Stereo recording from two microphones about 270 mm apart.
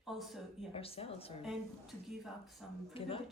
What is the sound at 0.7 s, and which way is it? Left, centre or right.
Speech, left.